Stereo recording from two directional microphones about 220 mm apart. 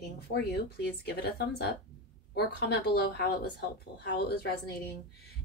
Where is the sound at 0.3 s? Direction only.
45° left (ahead or behind).